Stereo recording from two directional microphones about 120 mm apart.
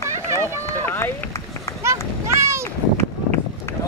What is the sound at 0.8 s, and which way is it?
Run, 15° left (ahead or behind).